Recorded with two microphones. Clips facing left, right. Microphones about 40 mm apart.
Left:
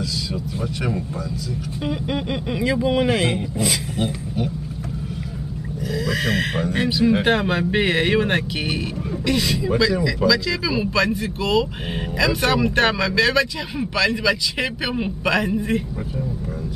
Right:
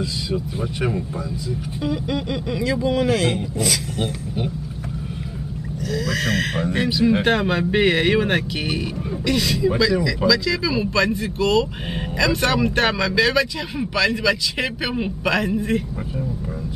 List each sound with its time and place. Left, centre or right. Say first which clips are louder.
1.9 s speech: right 1 dB; centre
5.9 s speech: even; centre